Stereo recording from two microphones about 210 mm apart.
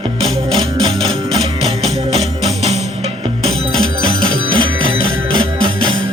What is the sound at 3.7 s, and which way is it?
Music, 75° right (ahead or behind).